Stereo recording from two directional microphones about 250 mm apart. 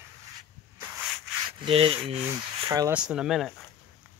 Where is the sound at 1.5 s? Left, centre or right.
Right.